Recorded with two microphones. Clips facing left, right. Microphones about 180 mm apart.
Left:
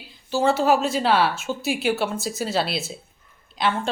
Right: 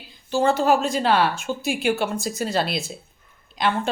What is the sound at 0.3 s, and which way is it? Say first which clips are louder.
Speech: even; 5° left (ahead or behind).